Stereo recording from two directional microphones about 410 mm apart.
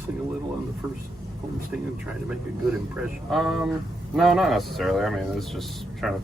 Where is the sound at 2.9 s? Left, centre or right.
Centre.